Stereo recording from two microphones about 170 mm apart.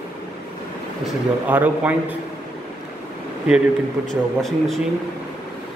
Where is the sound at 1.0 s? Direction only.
10° right (ahead or behind).